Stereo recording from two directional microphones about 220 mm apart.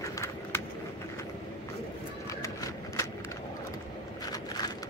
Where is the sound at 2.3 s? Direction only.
15° left (ahead or behind).